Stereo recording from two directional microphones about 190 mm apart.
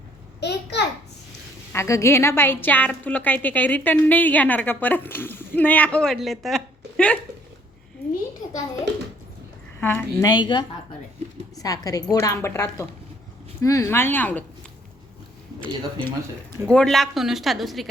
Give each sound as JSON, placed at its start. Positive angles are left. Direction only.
{"t": 0.3, "sound": "a sound", "side_deg": 60}
{"t": 1.7, "sound": "a woman's voice", "side_deg": 15}
{"t": 9.8, "sound": "a woman's voice", "side_deg": 10}
{"t": 15.6, "sound": "a woman's voice", "side_deg": 5}